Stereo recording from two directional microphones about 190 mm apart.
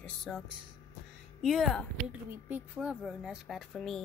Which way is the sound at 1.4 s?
Centre (ahead or behind).